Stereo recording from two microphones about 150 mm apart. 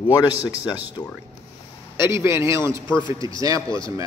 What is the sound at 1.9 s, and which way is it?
A man's voice, 15° right (ahead or behind).